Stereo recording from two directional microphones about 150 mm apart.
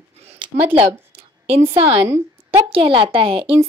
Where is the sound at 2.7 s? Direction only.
35° right (ahead or behind).